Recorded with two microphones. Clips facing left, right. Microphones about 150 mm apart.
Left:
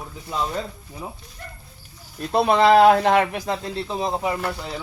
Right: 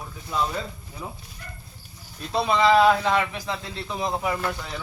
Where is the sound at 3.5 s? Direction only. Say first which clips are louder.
Left 5 dB; 35° left (ahead or behind).